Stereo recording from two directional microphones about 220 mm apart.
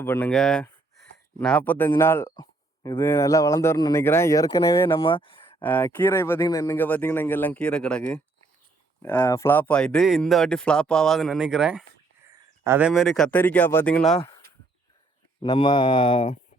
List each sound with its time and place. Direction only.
0.0 s speech: 10° left (ahead or behind)
5.0 s a sound: 20° left (ahead or behind)
5.6 s speech: 10° left (ahead or behind)
15.4 s speech: 20° left (ahead or behind)